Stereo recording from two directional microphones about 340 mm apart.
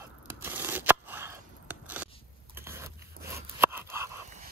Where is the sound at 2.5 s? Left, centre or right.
Centre.